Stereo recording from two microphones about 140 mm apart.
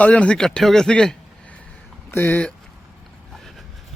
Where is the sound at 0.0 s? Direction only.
10° left (ahead or behind).